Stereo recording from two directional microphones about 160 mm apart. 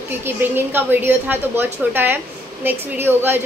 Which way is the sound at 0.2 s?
10° right (ahead or behind).